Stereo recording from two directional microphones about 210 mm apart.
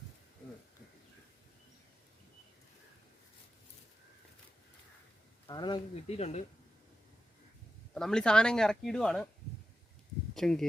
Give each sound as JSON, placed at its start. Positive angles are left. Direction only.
{"t": 5.5, "sound": "speech", "side_deg": 20}
{"t": 7.9, "sound": "speech", "side_deg": 5}
{"t": 10.3, "sound": "speech", "side_deg": 0}